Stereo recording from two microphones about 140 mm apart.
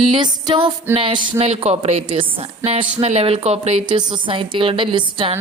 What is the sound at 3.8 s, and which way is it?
Speech, 35° right (ahead or behind).